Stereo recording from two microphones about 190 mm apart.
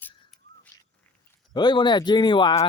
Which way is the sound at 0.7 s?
15° left (ahead or behind).